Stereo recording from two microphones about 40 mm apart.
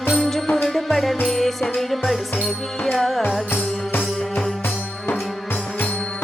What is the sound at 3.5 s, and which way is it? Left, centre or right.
Music, left.